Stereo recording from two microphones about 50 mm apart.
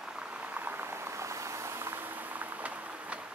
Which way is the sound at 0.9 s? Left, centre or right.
Right.